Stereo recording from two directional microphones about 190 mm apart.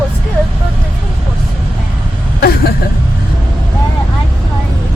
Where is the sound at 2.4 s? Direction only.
55° left (ahead or behind).